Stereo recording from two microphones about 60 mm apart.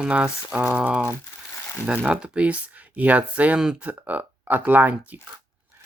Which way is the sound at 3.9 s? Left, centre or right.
Right.